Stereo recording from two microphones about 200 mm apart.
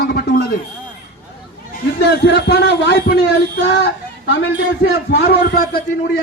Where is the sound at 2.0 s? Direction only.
55° left (ahead or behind).